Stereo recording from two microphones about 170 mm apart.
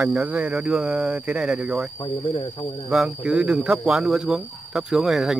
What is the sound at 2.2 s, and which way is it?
Speech, 30° left (ahead or behind).